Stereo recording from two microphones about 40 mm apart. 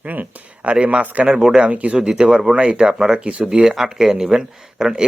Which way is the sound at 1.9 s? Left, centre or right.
Centre.